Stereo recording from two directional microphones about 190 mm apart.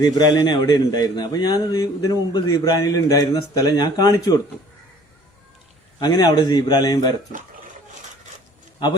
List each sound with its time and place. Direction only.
0.0 s a man's voice: 20° left (ahead or behind)
6.0 s a man's voice: 20° left (ahead or behind)